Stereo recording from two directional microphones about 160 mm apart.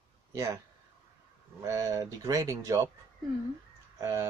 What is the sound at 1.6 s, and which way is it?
Speech, 20° right (ahead or behind).